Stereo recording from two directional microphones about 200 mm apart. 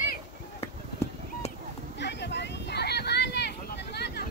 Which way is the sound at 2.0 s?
60° left (ahead or behind).